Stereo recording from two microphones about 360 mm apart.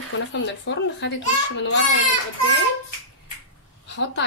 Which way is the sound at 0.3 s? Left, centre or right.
Left.